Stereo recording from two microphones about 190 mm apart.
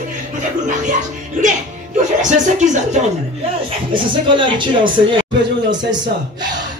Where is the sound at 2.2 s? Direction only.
40° right (ahead or behind).